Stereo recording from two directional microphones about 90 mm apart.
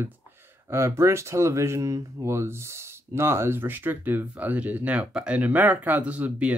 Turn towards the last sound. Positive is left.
turn(degrees=-15)  # may be behind; listen again after turning